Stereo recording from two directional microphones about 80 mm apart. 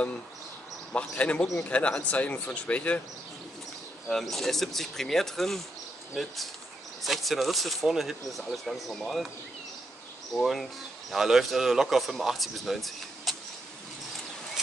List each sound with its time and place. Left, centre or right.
0.9 s speech: centre
4.1 s a man's voice: centre
10.3 s a man's voice: centre